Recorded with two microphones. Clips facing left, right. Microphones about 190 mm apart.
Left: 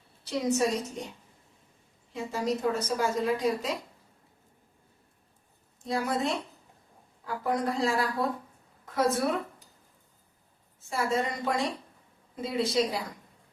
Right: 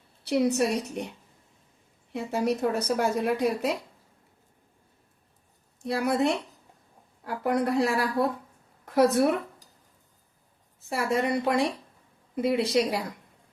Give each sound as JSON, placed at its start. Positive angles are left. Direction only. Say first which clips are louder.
{"t": 0.3, "sound": "a woman's voice", "louder": "right 3 dB", "side_deg": -65}
{"t": 2.1, "sound": "a woman's voice", "louder": "right 3 dB", "side_deg": -65}
{"t": 5.8, "sound": "a woman's voice", "louder": "right 4 dB", "side_deg": -65}
{"t": 7.4, "sound": "a woman's voice", "louder": "right 4 dB", "side_deg": -65}
{"t": 10.8, "sound": "a woman's voice", "louder": "right 2 dB", "side_deg": -65}